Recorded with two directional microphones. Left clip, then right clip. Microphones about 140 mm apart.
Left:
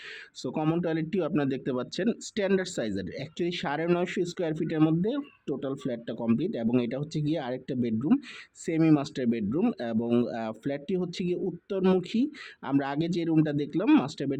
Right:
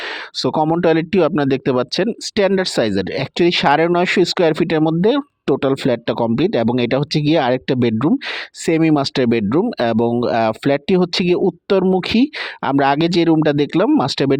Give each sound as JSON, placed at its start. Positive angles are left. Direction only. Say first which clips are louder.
{"t": 0.3, "sound": "speech", "louder": "right 13 dB", "side_deg": -40}